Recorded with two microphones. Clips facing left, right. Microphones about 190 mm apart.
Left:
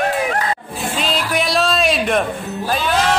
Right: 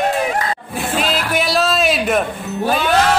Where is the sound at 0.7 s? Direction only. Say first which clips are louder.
Right 3 dB; 65° right (ahead or behind).